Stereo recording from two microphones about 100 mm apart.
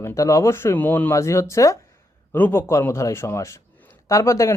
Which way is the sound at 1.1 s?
30° left (ahead or behind).